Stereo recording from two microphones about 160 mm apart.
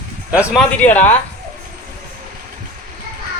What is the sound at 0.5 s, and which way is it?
Speech, 10° left (ahead or behind).